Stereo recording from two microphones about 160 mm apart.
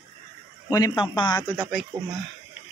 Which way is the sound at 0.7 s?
25° left (ahead or behind).